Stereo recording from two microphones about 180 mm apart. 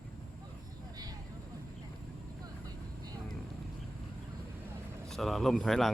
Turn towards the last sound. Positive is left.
turn(degrees=0)  # may be behind; listen again after turning